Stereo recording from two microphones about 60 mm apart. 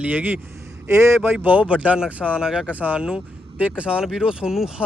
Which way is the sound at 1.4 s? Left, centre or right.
Right.